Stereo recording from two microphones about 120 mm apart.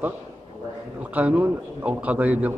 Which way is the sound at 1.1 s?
10° right (ahead or behind).